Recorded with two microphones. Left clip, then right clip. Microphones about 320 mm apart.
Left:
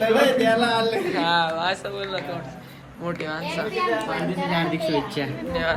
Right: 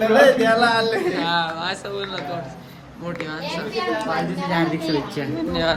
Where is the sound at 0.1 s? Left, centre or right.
Right.